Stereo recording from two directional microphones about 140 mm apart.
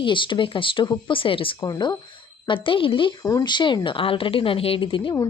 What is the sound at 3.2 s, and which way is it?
A woman's voice, 25° left (ahead or behind).